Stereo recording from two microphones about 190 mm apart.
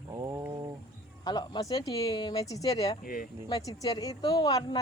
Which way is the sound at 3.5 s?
20° left (ahead or behind).